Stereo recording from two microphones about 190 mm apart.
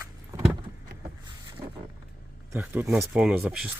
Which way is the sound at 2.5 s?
10° right (ahead or behind).